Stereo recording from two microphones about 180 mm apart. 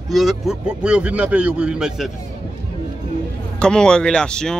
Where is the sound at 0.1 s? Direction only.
Centre (ahead or behind).